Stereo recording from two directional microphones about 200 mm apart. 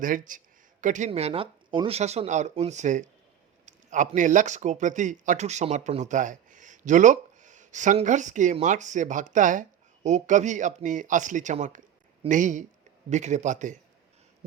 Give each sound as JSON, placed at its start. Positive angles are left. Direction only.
{"t": 0.0, "sound": "speech", "side_deg": -40}